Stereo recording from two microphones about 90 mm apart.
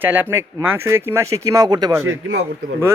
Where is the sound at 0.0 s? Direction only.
20° right (ahead or behind); by 1.9 s 45° right (ahead or behind).